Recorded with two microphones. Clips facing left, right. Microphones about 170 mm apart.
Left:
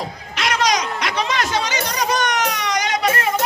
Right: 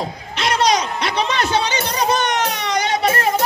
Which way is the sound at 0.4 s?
30° right (ahead or behind).